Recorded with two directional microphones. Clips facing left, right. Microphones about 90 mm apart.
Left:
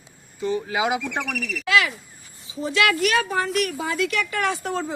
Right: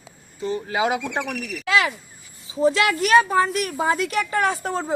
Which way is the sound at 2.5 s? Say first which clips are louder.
Right 3 dB; 35° right (ahead or behind).